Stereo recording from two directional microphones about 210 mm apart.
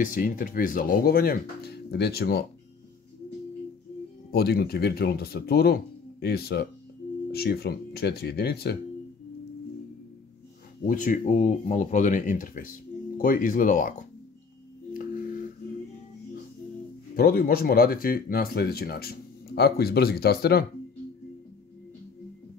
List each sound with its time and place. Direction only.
0.0 s speech: 40° left (ahead or behind)
4.3 s speech: 50° left (ahead or behind)
10.9 s speech: 40° left (ahead or behind)
15.0 s music: 45° left (ahead or behind)
17.1 s speech: 45° left (ahead or behind)